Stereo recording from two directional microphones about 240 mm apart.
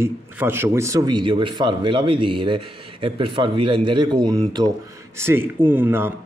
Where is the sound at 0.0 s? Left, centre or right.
Centre.